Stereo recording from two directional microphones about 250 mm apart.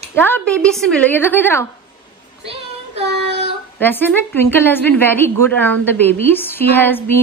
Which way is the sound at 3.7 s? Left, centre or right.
Centre.